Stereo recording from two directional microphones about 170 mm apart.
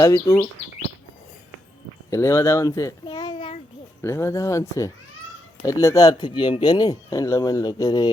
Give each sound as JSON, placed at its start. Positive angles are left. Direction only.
{"t": 0.0, "sound": "speech", "side_deg": 20}
{"t": 2.0, "sound": "a child's voice", "side_deg": 15}
{"t": 4.0, "sound": "speech", "side_deg": 15}